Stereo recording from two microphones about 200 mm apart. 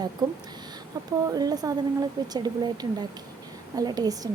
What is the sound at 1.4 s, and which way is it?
A woman's voice, 20° right (ahead or behind).